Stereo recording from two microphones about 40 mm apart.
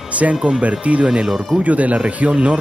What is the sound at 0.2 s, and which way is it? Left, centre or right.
Speech, right.